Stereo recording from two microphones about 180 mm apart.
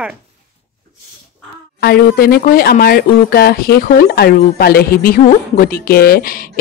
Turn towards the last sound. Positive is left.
turn(degrees=55)  # may be behind; listen again after turning